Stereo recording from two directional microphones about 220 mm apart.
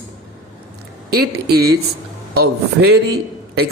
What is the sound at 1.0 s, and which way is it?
A man's voice, 45° right (ahead or behind).